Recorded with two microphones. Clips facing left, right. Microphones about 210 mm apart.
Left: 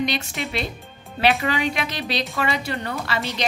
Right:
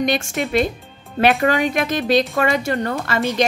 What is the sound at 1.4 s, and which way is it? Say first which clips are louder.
A woman's voice: right 6 dB; 50° right (ahead or behind).